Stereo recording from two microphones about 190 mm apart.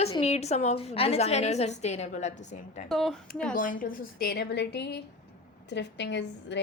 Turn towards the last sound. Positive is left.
turn(degrees=65)  # may be behind; listen again after turning